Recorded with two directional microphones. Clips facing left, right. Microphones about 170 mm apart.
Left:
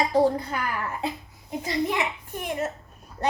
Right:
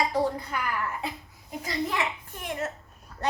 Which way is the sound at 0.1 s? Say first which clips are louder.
Left 6 dB; 30° left (ahead or behind).